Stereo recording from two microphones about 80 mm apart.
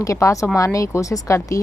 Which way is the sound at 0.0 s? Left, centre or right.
Left.